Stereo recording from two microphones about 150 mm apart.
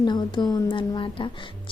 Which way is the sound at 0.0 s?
30° left (ahead or behind).